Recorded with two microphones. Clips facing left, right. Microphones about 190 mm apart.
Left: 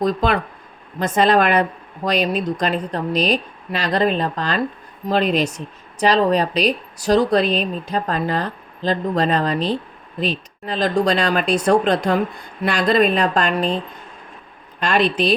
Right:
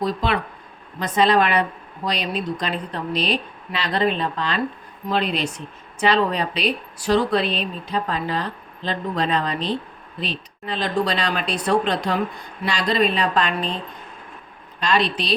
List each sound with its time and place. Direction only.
0.0 s speech: 45° left (ahead or behind)
14.8 s speech: 50° left (ahead or behind)